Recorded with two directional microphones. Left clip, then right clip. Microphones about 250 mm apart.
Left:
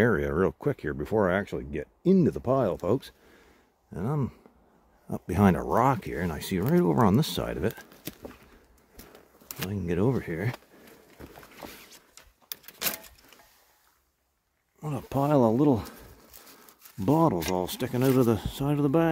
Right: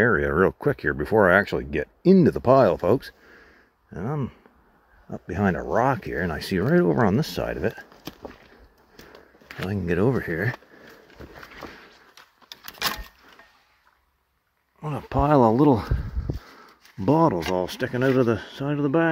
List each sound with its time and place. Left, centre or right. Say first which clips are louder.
0.0 s speech: right 5 dB; centre
9.7 s speech: right 5 dB; centre
12.5 s a sound: right 1 dB; left
14.8 s speech: right 5 dB; centre